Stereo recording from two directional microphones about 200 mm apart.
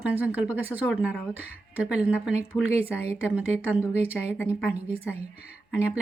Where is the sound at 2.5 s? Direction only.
20° left (ahead or behind).